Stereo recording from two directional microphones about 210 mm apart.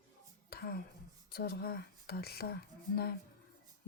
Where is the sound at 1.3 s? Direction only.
45° left (ahead or behind).